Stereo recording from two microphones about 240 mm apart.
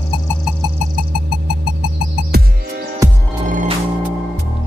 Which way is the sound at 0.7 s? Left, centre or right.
Right.